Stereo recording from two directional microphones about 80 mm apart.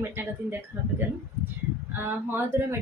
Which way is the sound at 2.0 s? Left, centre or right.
Right.